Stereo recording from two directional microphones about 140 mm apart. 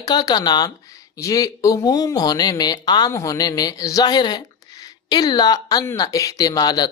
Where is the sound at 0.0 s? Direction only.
30° left (ahead or behind).